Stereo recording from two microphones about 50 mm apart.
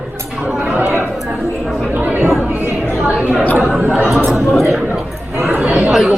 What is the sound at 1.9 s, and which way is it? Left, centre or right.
Chatter, right.